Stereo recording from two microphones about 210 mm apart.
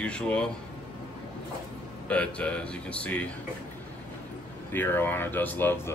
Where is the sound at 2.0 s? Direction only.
5° left (ahead or behind).